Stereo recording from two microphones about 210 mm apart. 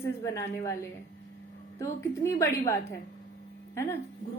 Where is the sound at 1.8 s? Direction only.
15° left (ahead or behind).